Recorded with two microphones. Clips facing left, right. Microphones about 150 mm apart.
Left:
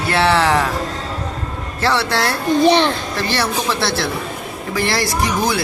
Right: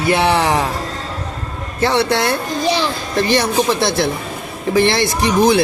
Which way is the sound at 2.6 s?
60° left (ahead or behind).